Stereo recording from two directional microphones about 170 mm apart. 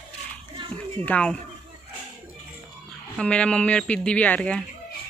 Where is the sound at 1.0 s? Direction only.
5° left (ahead or behind).